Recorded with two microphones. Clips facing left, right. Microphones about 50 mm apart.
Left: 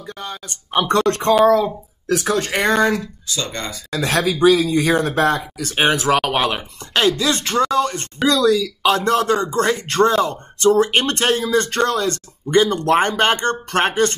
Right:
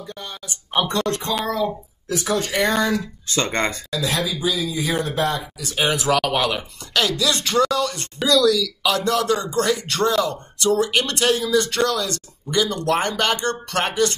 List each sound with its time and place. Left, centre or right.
0.1 s speech: left
2.1 s speech: left
2.5 s speech: left
3.3 s speech: right
3.9 s speech: left
5.0 s speech: left